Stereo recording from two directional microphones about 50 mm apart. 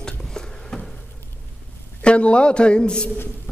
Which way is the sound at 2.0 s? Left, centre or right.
Left.